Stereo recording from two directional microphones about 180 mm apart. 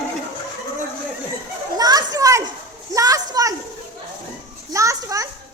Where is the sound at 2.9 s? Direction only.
20° right (ahead or behind).